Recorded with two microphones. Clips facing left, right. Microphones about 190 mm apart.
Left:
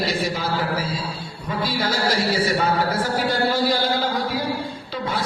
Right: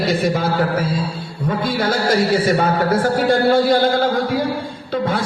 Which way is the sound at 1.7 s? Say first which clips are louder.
Right 5 dB; 50° right (ahead or behind).